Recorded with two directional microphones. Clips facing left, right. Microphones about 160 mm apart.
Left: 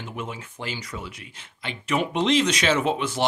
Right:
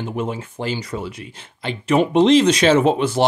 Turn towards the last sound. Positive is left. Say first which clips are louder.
# right 7 dB
turn(degrees=-30)  # may be behind; listen again after turning